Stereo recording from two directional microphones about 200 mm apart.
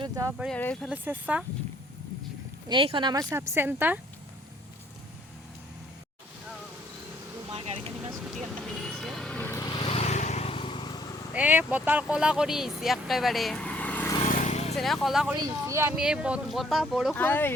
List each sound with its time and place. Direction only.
0.0 s a sound: 15° right (ahead or behind)
0.3 s speech: centre (ahead or behind)
0.9 s speech: 10° right (ahead or behind)
2.6 s speech: 25° right (ahead or behind); by 4.0 s 10° right (ahead or behind)
7.5 s vehicle: 30° right (ahead or behind)
8.1 s vehicle: centre (ahead or behind); by 10.8 s 25° left (ahead or behind)
11.3 s speech: 10° right (ahead or behind); by 14.1 s 10° left (ahead or behind)
14.3 s vehicle: 40° left (ahead or behind)
14.8 s speech: centre (ahead or behind)
17.2 s speech: 10° left (ahead or behind)